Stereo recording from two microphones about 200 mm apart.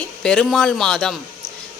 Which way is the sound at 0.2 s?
5° left (ahead or behind).